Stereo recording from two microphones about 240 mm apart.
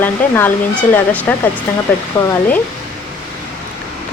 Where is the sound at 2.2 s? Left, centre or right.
Centre.